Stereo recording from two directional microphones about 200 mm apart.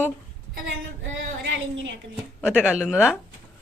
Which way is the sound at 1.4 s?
65° right (ahead or behind).